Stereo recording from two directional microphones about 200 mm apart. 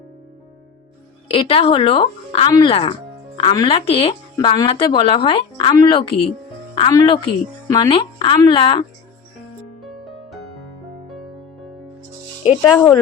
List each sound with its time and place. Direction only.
1.3 s speech: 25° left (ahead or behind)
9.8 s music: centre (ahead or behind)
12.5 s speech: 5° left (ahead or behind)